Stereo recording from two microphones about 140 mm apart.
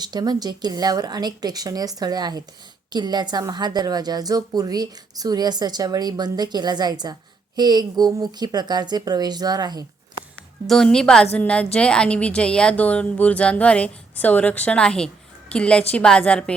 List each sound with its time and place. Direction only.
0.0 s a woman's voice: 30° right (ahead or behind)
10.7 s a woman's voice: 5° left (ahead or behind)